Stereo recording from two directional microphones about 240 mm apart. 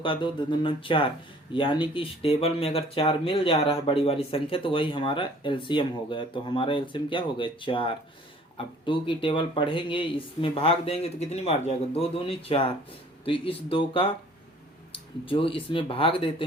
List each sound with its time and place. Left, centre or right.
0.0 s speech: centre